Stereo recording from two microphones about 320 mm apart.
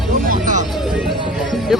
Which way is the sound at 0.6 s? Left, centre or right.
Centre.